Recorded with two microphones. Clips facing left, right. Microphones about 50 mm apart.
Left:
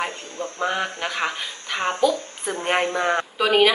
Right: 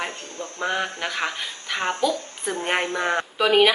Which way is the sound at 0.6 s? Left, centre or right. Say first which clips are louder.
Left 1 dB; centre.